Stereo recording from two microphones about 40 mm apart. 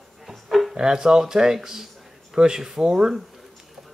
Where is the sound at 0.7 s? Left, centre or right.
Centre.